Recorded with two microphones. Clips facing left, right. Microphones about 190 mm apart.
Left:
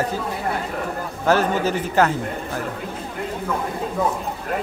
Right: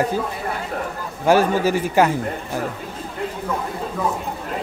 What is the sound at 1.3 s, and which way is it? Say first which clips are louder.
Speech: right 3 dB; 10° right (ahead or behind).